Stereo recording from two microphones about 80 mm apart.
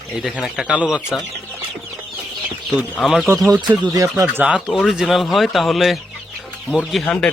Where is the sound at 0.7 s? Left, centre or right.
Centre.